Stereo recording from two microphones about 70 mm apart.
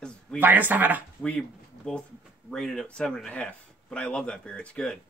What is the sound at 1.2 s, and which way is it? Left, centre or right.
Speech, centre.